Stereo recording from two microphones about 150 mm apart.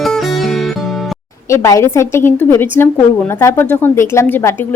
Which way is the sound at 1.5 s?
20° left (ahead or behind).